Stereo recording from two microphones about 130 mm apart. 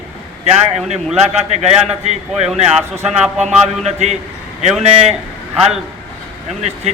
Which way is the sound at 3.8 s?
60° right (ahead or behind).